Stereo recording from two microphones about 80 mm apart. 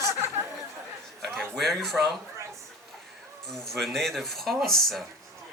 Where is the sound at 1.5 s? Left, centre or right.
Centre.